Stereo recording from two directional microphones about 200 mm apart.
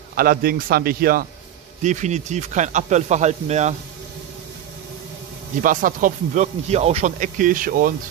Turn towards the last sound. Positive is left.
turn(degrees=-45)  # may be behind; listen again after turning